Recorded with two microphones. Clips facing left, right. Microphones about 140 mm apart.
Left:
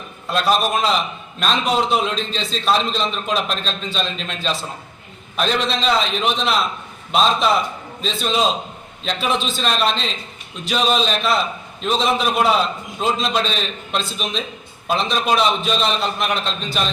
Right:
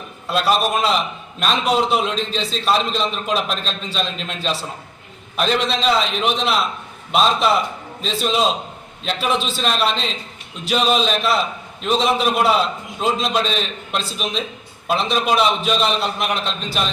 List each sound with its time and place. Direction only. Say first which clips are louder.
0.3 s a man's voice: even; 5° right (ahead or behind)